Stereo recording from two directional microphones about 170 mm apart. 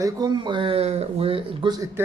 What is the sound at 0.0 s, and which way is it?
Speech, 25° right (ahead or behind).